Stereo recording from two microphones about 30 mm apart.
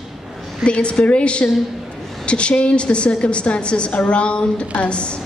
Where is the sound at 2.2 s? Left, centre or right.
Left.